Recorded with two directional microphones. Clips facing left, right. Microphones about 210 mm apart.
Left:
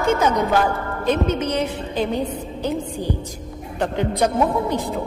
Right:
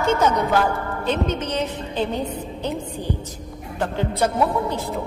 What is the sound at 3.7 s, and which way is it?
A woman's voice, 15° left (ahead or behind).